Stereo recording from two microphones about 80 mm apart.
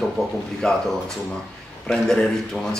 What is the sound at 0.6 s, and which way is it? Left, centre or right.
Speech, centre.